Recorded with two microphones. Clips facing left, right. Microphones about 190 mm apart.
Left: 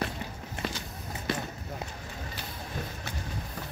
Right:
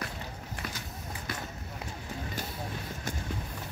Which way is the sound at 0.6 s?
25° left (ahead or behind).